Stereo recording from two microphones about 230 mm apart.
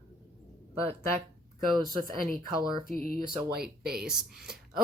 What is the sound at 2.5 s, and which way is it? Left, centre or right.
Speech, centre.